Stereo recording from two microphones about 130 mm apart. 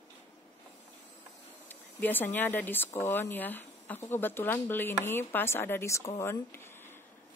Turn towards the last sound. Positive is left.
turn(degrees=20)  # may be behind; listen again after turning